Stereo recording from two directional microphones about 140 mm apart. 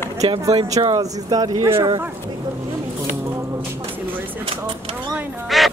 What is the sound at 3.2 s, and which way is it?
Music, 20° right (ahead or behind).